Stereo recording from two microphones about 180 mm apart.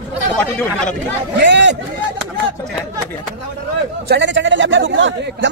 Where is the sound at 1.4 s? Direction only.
75° right (ahead or behind).